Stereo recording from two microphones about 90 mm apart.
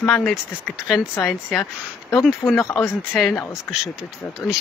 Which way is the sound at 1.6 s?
40° left (ahead or behind).